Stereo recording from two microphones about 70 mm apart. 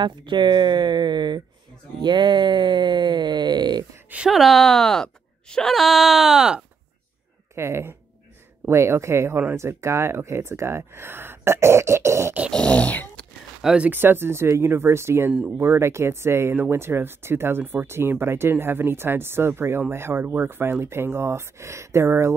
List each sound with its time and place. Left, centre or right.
0.4 s speech: right
4.3 s speech: centre
7.5 s speech: right
12.5 s dog: centre
13.6 s speech: centre
13.8 s speech: right